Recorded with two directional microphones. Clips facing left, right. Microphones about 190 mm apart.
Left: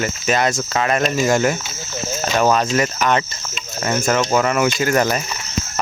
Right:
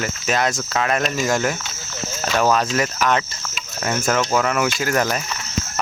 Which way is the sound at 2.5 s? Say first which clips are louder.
Left 2 dB; centre (ahead or behind).